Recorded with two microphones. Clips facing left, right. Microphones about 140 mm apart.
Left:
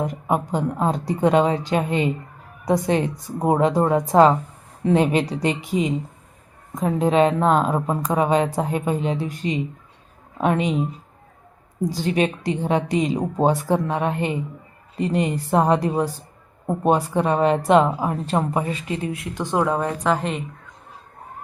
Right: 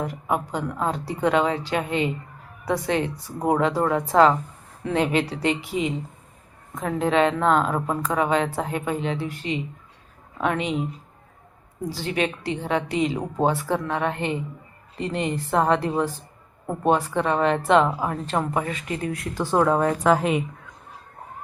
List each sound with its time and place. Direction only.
0.0 s a woman's voice: 20° left (ahead or behind)
11.9 s a woman's voice: 15° left (ahead or behind)
19.5 s speech: 5° left (ahead or behind)